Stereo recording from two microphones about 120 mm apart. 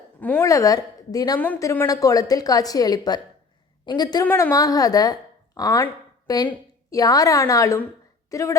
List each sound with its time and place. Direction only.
0.2 s a woman's voice: 15° left (ahead or behind)
0.4 s a woman's voice: 30° left (ahead or behind)
4.3 s a woman's voice: 20° left (ahead or behind)
4.5 s a woman's voice: 30° left (ahead or behind)